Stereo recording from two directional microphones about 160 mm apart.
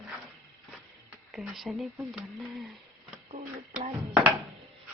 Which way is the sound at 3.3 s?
45° right (ahead or behind).